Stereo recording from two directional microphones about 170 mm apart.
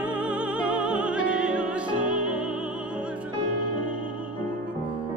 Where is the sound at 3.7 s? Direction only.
55° right (ahead or behind).